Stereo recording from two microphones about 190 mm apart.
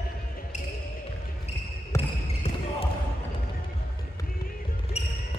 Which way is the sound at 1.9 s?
30° left (ahead or behind).